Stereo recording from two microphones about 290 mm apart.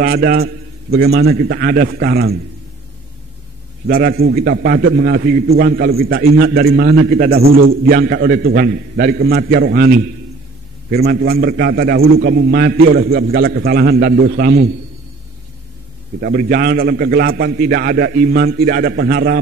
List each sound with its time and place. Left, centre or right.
0.0 s a man's voice: right
3.8 s a man's voice: right
16.2 s a man's voice: right